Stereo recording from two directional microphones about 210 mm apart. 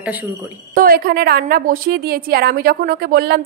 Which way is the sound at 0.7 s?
45° right (ahead or behind).